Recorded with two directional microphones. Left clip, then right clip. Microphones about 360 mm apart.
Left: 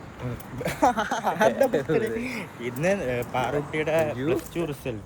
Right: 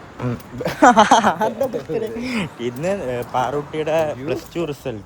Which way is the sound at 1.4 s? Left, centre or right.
Centre.